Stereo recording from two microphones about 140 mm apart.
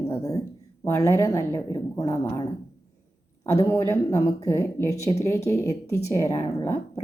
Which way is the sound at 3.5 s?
20° left (ahead or behind).